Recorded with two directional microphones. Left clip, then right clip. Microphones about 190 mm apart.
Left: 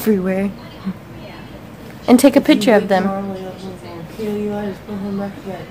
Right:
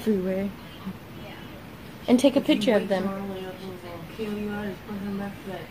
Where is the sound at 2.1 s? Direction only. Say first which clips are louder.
Left 9 dB; 15° left (ahead or behind).